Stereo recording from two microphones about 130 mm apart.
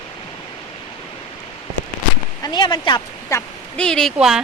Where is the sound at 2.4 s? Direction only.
35° left (ahead or behind).